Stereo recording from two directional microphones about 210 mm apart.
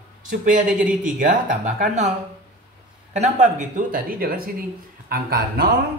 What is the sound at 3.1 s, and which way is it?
Speech, 35° right (ahead or behind).